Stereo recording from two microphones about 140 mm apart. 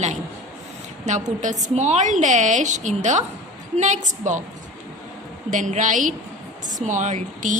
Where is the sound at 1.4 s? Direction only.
60° right (ahead or behind).